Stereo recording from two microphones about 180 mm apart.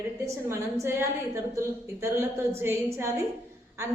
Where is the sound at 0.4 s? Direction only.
15° right (ahead or behind).